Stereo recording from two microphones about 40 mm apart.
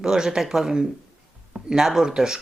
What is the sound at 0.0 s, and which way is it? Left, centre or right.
A woman's voice, centre.